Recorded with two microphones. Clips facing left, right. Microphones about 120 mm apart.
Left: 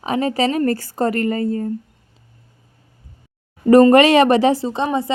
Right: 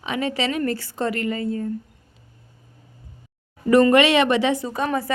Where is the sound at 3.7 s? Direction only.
40° left (ahead or behind).